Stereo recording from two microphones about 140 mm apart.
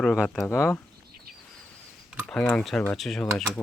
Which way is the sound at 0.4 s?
20° left (ahead or behind).